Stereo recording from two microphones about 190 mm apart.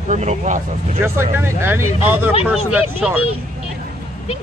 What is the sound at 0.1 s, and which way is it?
Speech, 40° right (ahead or behind).